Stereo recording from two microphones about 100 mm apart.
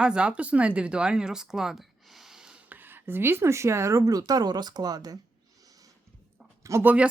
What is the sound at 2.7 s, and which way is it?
Speech, 20° right (ahead or behind).